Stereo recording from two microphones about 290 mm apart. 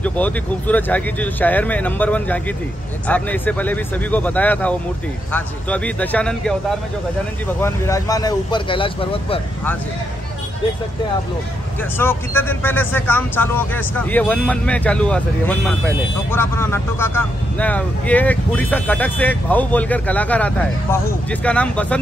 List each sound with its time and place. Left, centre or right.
0.0 s speech: centre
7.6 s speech: centre
12.0 s speech: centre